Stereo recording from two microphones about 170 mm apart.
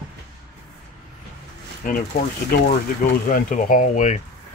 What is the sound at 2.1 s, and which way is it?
Speech, 60° left (ahead or behind).